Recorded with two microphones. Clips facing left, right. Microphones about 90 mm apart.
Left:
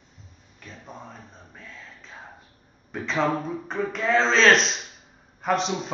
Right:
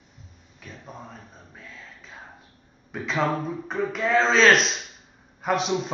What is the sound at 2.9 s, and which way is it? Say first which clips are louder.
Speech: left 1 dB; 5° right (ahead or behind).